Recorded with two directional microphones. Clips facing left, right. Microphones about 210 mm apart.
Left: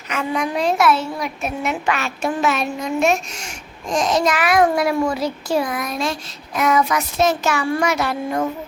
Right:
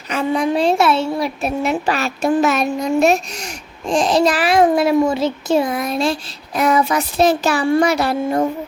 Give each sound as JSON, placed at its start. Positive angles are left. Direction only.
{"t": 0.1, "sound": "speech", "side_deg": -30}